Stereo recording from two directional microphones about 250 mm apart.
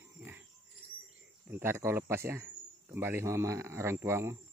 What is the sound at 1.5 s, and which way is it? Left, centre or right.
Speech, centre.